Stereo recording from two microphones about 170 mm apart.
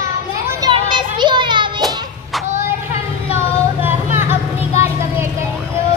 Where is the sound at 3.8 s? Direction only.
15° right (ahead or behind).